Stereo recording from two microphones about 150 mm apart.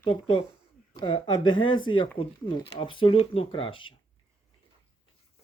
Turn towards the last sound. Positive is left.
turn(degrees=35)  # may be behind; listen again after turning